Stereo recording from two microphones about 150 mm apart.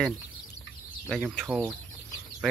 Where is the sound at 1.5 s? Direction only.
15° right (ahead or behind).